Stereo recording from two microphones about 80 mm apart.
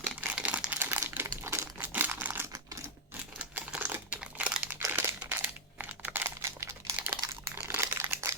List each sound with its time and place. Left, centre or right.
0.0 s crumpling: centre
0.8 s crumpling: right
3.8 s crumpling: right
4.1 s crumpling: centre
4.9 s crumpling: right
6.9 s crumpling: right
8.1 s typing: right